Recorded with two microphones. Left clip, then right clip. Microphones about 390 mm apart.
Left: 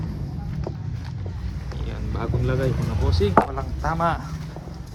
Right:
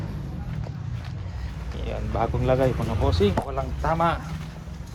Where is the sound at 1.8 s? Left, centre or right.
Centre.